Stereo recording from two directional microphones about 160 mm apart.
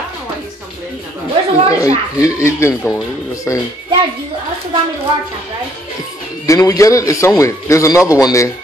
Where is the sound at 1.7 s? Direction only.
20° left (ahead or behind).